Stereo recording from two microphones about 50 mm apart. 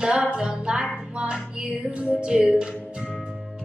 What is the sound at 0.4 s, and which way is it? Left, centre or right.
Music, centre.